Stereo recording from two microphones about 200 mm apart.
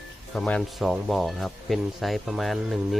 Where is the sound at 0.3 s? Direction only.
5° left (ahead or behind).